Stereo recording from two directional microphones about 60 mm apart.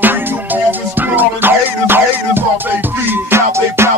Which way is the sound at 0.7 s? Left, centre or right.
Right.